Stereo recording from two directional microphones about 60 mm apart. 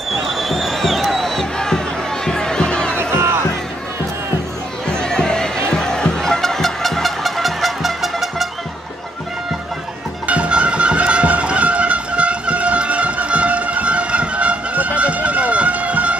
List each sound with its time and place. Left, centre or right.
0.1 s crowd: centre
2.2 s music: centre
3.0 s music: right
4.8 s music: centre
10.2 s music: right